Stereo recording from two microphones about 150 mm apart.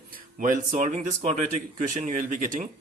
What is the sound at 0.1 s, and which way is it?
Speech, 65° right (ahead or behind).